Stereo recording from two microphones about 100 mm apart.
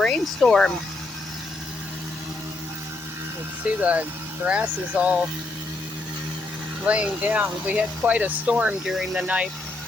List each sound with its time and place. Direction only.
0.0 s speech: 5° left (ahead or behind)
3.8 s speech: 15° right (ahead or behind)
6.8 s speech: 15° right (ahead or behind)